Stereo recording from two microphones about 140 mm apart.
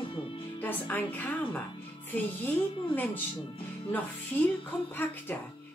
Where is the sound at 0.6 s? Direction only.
15° left (ahead or behind).